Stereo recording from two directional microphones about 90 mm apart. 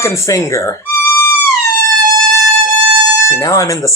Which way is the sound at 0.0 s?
35° left (ahead or behind).